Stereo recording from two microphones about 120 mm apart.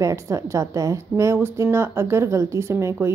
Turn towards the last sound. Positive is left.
turn(degrees=-20)  # may be behind; listen again after turning